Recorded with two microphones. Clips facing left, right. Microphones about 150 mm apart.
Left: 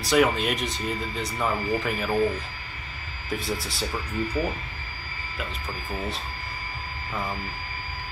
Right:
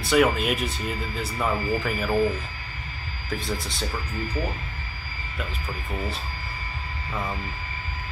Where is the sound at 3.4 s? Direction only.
Centre (ahead or behind).